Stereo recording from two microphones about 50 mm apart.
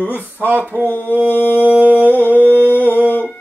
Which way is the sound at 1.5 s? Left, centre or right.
Right.